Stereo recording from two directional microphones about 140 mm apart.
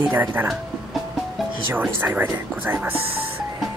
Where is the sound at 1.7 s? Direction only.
15° right (ahead or behind).